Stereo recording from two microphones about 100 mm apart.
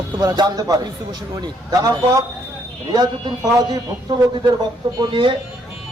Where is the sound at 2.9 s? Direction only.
50° right (ahead or behind).